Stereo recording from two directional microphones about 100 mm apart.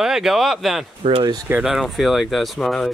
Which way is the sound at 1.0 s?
75° right (ahead or behind).